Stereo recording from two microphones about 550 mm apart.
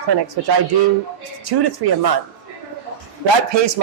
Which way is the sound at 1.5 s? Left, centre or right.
Right.